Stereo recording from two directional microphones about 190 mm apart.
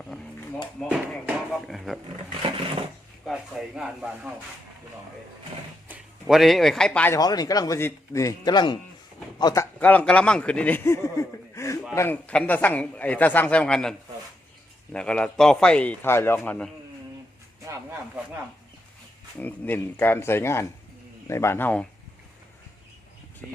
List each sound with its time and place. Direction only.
0.8 s a sound: centre (ahead or behind)
3.2 s a man's voice: centre (ahead or behind)
5.9 s speech: centre (ahead or behind)
7.2 s speech: 20° left (ahead or behind)
9.8 s speech: 10° left (ahead or behind)
14.9 s a man's voice: 5° left (ahead or behind)
19.4 s speech: 10° left (ahead or behind)